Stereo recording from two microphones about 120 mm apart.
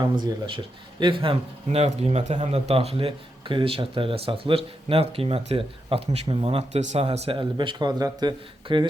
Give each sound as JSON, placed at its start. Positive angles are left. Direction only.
{"t": 0.0, "sound": "speech", "side_deg": -40}
{"t": 7.3, "sound": "speech", "side_deg": -45}